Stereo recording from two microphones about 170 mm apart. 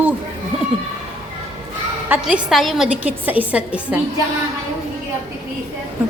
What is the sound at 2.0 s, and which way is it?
A woman's voice, 10° right (ahead or behind).